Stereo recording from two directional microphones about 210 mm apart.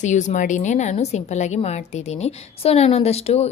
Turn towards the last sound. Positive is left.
turn(degrees=30)  # may be behind; listen again after turning